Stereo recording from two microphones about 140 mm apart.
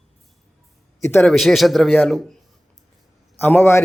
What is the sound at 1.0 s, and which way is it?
Speech, 15° left (ahead or behind).